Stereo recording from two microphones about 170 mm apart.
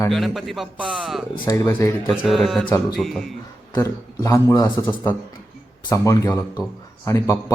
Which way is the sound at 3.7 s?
20° left (ahead or behind).